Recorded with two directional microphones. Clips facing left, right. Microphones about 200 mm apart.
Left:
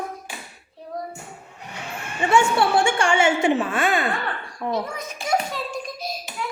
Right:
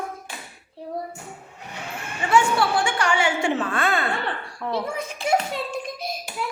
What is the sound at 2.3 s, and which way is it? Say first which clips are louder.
A woman's voice: left 1 dB; 25° left (ahead or behind).